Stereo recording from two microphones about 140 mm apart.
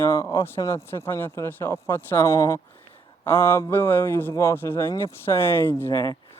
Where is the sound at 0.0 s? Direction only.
20° left (ahead or behind).